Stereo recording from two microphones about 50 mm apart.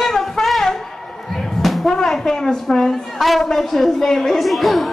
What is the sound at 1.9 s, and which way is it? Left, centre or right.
A woman's voice, centre.